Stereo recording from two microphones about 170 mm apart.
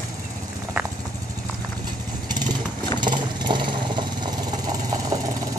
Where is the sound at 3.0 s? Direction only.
25° right (ahead or behind).